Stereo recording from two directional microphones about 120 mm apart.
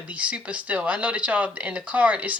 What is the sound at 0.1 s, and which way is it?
Speech, 10° right (ahead or behind).